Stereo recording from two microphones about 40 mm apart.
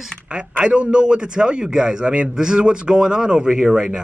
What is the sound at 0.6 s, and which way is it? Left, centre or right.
Speech, right.